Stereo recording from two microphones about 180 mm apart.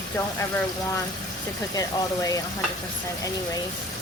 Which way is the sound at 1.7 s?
20° left (ahead or behind).